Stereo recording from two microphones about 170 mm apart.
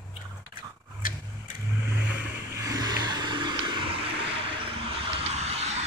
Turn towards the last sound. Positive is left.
turn(degrees=-40)  # may be behind; listen again after turning